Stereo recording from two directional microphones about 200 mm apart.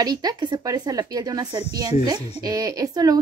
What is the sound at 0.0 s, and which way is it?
A woman's voice, 20° right (ahead or behind).